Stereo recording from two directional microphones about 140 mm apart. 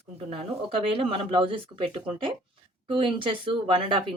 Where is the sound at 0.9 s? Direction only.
40° right (ahead or behind).